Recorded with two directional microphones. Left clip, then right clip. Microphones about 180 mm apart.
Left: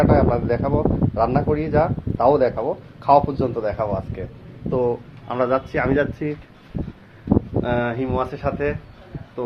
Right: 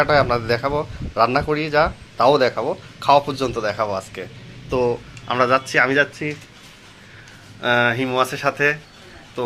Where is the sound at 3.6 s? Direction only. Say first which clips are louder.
Right 1 dB; centre (ahead or behind).